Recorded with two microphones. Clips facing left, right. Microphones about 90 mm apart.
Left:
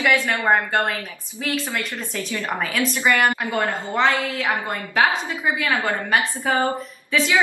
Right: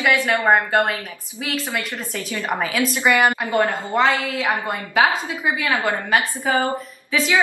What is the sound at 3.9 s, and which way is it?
A woman's voice, 5° right (ahead or behind).